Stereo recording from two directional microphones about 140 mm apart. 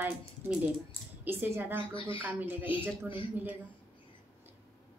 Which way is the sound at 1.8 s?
35° left (ahead or behind).